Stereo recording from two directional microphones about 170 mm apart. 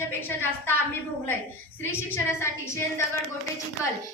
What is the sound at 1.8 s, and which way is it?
Speech, 15° left (ahead or behind).